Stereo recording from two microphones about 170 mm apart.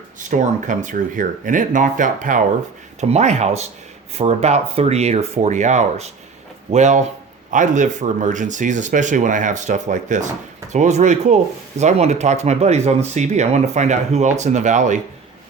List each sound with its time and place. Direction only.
0.3 s speech: 50° right (ahead or behind)